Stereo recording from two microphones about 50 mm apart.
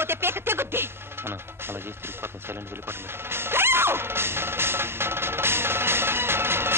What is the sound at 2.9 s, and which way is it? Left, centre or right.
Music, right.